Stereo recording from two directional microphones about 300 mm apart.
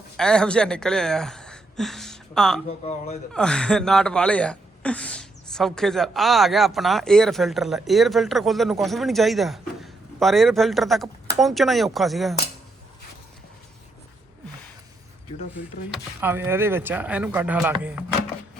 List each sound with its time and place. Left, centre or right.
0.2 s speech: centre
2.6 s speech: left
3.3 s speech: centre
15.9 s speech: centre